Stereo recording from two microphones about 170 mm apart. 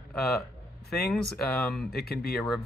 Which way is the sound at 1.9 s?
65° left (ahead or behind).